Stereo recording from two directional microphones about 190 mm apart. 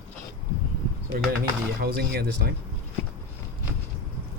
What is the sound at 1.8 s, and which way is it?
Speech, 55° right (ahead or behind).